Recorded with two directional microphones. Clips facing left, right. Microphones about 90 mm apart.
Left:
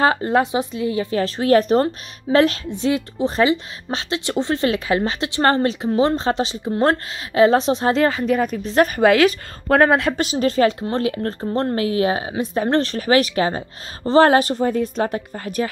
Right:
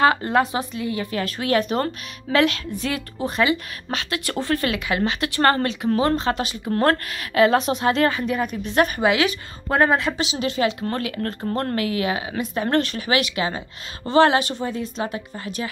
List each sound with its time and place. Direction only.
0.0 s a woman's voice: 25° left (ahead or behind)
7.4 s speech: 30° left (ahead or behind)
10.8 s a woman's voice: 30° left (ahead or behind); by 15.7 s 45° left (ahead or behind)